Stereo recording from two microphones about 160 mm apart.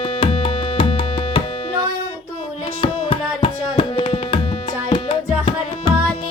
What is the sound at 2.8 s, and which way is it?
Tabla, 35° left (ahead or behind).